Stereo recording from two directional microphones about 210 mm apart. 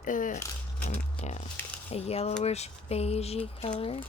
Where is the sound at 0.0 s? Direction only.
40° left (ahead or behind).